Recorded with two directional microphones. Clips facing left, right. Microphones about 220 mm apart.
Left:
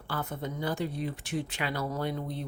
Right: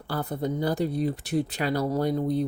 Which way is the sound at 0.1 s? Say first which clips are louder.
Right 7 dB; 35° right (ahead or behind).